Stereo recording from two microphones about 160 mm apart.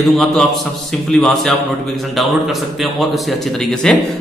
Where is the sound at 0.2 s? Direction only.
Centre (ahead or behind).